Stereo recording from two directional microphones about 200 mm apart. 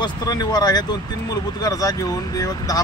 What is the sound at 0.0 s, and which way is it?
Speech, 20° left (ahead or behind).